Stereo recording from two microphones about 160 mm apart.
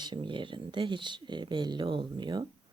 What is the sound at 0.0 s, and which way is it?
Speech, 30° right (ahead or behind).